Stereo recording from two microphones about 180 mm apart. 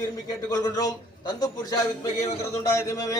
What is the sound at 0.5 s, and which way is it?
Speech, 20° left (ahead or behind).